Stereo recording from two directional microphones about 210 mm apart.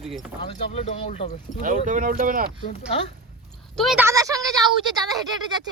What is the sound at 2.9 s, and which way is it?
Speech, 30° left (ahead or behind).